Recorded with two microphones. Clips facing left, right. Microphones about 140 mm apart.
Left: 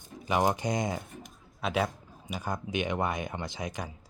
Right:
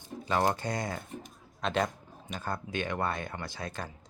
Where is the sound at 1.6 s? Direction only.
5° left (ahead or behind).